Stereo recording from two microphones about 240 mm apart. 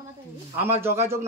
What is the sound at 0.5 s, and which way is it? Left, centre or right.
Speech, centre.